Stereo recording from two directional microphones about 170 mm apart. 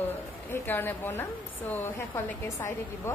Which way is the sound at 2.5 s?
15° left (ahead or behind).